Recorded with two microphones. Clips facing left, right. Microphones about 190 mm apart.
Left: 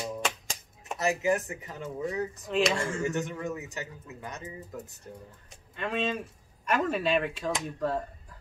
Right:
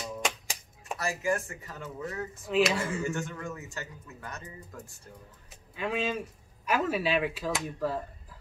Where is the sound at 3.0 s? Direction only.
15° left (ahead or behind).